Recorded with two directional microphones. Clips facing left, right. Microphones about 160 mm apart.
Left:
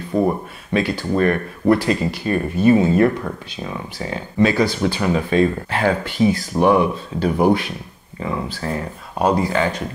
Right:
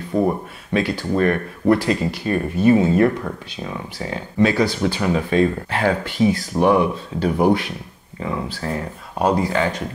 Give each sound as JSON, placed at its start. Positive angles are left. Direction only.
{"t": 0.1, "sound": "speech", "side_deg": 30}
{"t": 0.7, "sound": "speech", "side_deg": 20}